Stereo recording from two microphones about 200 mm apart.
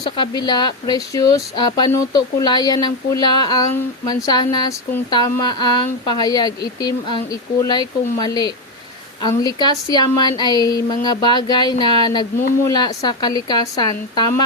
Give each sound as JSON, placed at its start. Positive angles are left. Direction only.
{"t": 0.2, "sound": "speech", "side_deg": 20}